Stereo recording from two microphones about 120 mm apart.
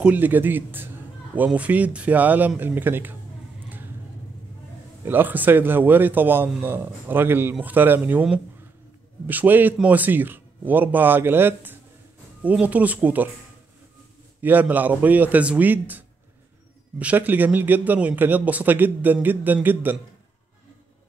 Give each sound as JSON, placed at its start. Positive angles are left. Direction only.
{"t": 0.0, "sound": "a man's voice", "side_deg": -15}
{"t": 5.0, "sound": "a man's voice", "side_deg": -15}
{"t": 14.4, "sound": "a man's voice", "side_deg": -15}
{"t": 17.0, "sound": "a man's voice", "side_deg": -15}